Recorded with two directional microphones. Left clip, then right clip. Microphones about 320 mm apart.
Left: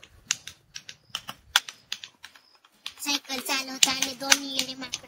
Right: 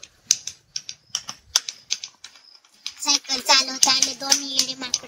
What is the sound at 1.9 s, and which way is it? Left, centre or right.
Typing, centre.